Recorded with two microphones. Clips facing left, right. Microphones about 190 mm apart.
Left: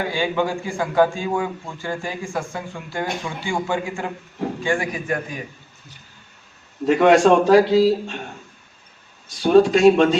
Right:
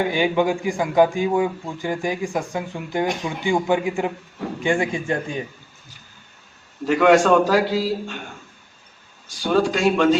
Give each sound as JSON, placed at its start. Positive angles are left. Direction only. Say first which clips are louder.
{"t": 0.0, "sound": "a man's voice", "louder": "right 3 dB", "side_deg": -20}
{"t": 6.8, "sound": "a man's voice", "louder": "left 1 dB", "side_deg": 25}
{"t": 9.4, "sound": "a man's voice", "louder": "left 6 dB", "side_deg": 25}